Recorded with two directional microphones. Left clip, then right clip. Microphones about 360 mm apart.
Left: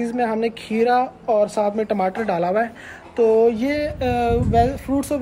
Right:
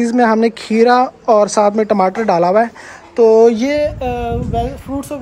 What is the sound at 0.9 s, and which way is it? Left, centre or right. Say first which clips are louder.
A woman's voice: right 6 dB; right.